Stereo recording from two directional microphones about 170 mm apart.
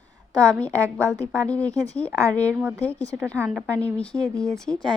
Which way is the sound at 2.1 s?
20° right (ahead or behind).